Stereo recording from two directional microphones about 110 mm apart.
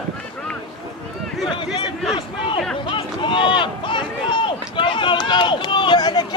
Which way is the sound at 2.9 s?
50° left (ahead or behind).